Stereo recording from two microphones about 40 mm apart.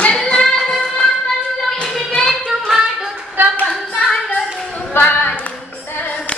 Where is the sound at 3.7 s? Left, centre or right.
Centre.